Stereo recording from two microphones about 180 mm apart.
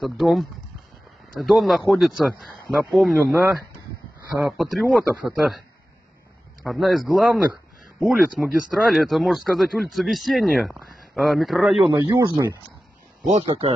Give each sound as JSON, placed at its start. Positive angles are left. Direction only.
{"t": 0.0, "sound": "speech", "side_deg": 0}
{"t": 6.6, "sound": "speech", "side_deg": 0}
{"t": 11.9, "sound": "speech", "side_deg": -20}
{"t": 13.2, "sound": "speech", "side_deg": -35}